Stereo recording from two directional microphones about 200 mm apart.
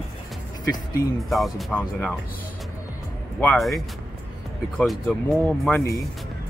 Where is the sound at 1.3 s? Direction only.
5° left (ahead or behind).